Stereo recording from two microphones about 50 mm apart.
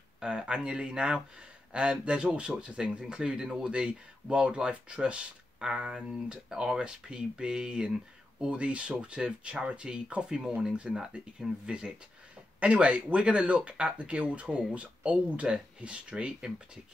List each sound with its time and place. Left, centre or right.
0.5 s speech: centre